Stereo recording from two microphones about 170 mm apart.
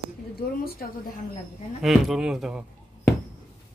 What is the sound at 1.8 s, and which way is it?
Speech, centre (ahead or behind).